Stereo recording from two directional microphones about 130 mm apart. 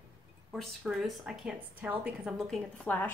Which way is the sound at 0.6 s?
5° right (ahead or behind).